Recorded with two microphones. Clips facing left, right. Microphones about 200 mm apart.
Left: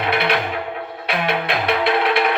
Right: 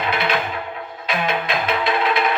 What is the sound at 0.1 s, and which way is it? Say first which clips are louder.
Music: left 3 dB; 65° left (ahead or behind).